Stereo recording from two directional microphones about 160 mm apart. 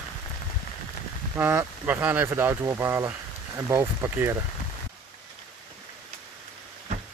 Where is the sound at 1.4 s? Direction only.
10° right (ahead or behind).